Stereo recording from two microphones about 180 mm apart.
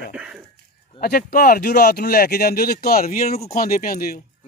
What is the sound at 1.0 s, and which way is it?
Speech, 55° left (ahead or behind).